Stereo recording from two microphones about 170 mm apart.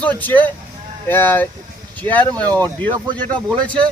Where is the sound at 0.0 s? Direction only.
10° left (ahead or behind).